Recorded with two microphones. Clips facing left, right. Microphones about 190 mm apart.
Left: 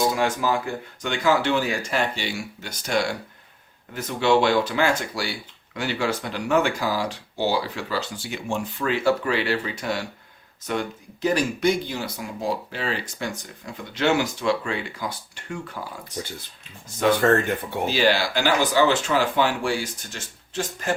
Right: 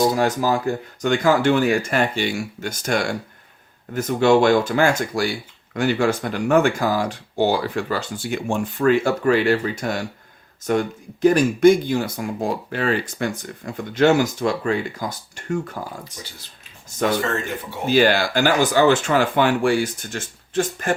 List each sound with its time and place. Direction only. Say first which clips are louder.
0.1 s speech: right 3 dB; 40° right (ahead or behind)
17.2 s speech: left 4 dB; 55° left (ahead or behind)
17.8 s speech: right 5 dB; 50° right (ahead or behind)